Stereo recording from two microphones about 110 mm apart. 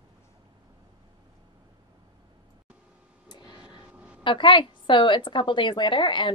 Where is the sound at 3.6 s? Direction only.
10° right (ahead or behind).